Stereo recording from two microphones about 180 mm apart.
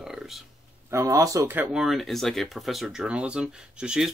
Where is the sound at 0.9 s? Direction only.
15° right (ahead or behind).